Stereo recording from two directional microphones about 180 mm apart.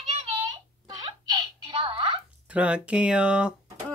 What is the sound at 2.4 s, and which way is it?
Speech, 5° right (ahead or behind).